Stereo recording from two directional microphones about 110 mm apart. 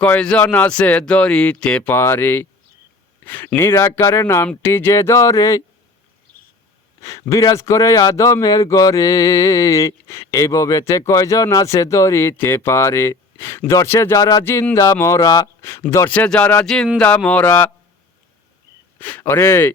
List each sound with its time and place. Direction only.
0.0 s speech: 10° left (ahead or behind)
1.9 s a man's voice: 20° left (ahead or behind)
7.0 s a man's voice: 30° left (ahead or behind)
14.4 s a man's voice: 20° left (ahead or behind); by 15.4 s 35° left (ahead or behind)
15.6 s a man's voice: 25° left (ahead or behind)
16.6 s speech: 5° left (ahead or behind)
18.9 s a man's voice: 15° left (ahead or behind)